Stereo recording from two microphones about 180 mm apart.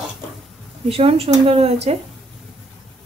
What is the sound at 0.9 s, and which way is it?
A woman's voice, 30° right (ahead or behind).